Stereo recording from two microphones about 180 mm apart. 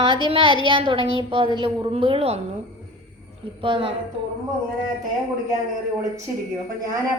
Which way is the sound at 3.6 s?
30° right (ahead or behind).